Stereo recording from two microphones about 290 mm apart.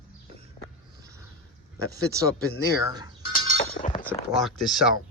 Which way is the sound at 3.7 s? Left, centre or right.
Left.